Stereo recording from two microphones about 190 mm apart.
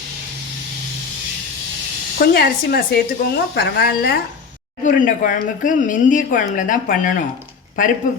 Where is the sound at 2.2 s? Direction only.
55° left (ahead or behind).